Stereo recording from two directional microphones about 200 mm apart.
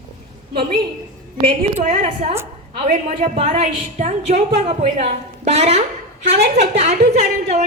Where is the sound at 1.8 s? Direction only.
35° right (ahead or behind).